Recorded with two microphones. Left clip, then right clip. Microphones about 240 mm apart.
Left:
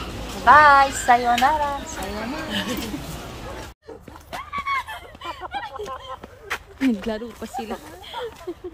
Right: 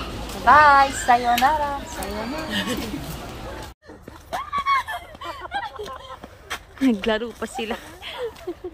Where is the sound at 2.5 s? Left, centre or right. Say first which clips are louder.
Right 1 dB; right.